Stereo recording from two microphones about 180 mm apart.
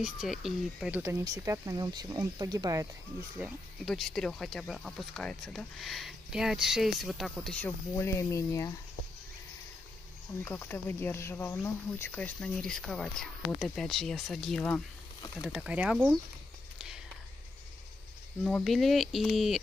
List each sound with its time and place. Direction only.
0.0 s speech: 5° right (ahead or behind); by 2.9 s 20° right (ahead or behind)
3.3 s speech: 5° right (ahead or behind)
7.9 s speech: 15° left (ahead or behind)
10.4 s speech: 10° left (ahead or behind); by 16.2 s 5° right (ahead or behind)
18.4 s speech: 5° left (ahead or behind)